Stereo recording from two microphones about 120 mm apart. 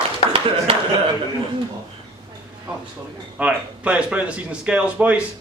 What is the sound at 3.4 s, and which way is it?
Speech, 10° right (ahead or behind).